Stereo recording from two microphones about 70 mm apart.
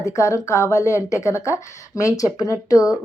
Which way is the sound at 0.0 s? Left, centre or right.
Left.